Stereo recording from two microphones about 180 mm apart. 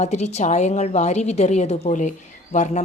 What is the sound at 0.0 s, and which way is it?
A woman's voice, 40° left (ahead or behind).